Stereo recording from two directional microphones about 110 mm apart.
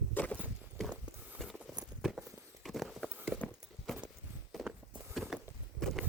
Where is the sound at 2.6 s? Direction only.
Centre (ahead or behind).